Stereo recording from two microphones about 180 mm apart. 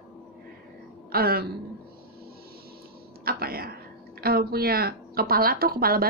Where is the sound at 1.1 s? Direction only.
55° right (ahead or behind).